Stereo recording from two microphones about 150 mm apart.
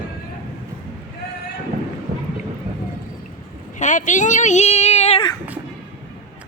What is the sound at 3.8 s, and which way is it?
A woman's voice, 55° left (ahead or behind).